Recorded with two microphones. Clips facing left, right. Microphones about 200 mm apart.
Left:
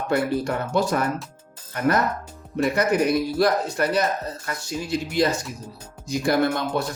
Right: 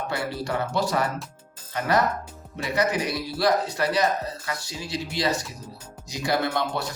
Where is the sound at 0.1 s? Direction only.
50° left (ahead or behind).